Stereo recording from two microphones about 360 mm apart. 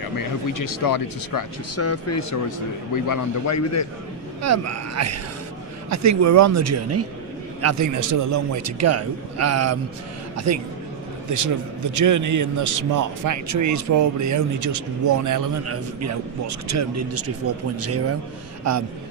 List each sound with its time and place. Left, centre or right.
0.5 s speech: left
1.7 s speech: left
2.9 s a man's voice: left
4.4 s a man's voice: right
15.6 s a man's voice: right